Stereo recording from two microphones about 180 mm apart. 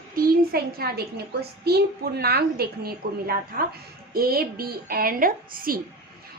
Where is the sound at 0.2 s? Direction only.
60° right (ahead or behind).